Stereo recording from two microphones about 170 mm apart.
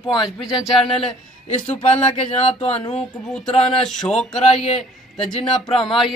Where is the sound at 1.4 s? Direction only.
40° left (ahead or behind).